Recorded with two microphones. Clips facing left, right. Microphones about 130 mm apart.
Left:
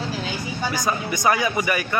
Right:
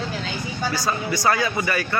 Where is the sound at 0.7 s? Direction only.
20° left (ahead or behind).